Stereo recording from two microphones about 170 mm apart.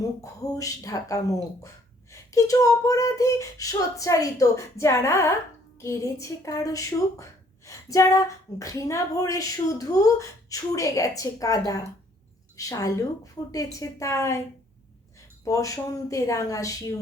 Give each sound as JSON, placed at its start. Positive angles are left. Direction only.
{"t": 0.0, "sound": "a woman's voice", "side_deg": 20}
{"t": 15.4, "sound": "speech", "side_deg": 20}